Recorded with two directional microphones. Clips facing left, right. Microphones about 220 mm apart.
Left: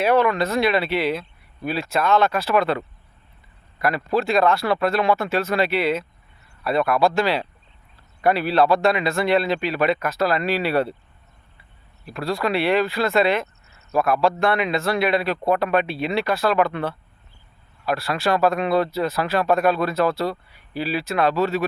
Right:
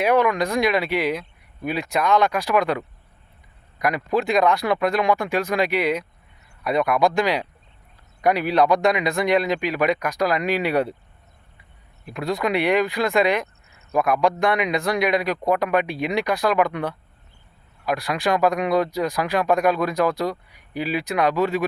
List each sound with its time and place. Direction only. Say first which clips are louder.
0.0 s speech: even; 15° right (ahead or behind)
12.0 s speech: even; 20° right (ahead or behind)